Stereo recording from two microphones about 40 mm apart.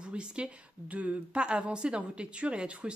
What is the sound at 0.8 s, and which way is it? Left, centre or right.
Speech, right.